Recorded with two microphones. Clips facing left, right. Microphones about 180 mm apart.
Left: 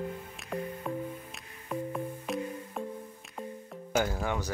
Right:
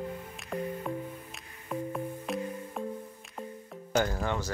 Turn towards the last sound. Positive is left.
turn(degrees=10)  # may be behind; listen again after turning